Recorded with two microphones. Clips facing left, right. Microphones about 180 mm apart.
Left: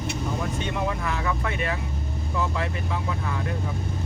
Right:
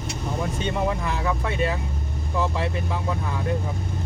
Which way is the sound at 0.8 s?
30° right (ahead or behind).